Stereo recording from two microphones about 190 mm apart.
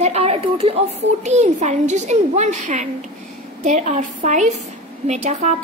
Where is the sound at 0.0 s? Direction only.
35° right (ahead or behind).